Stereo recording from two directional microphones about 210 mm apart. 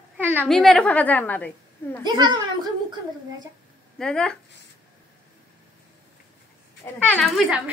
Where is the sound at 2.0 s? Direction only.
20° right (ahead or behind).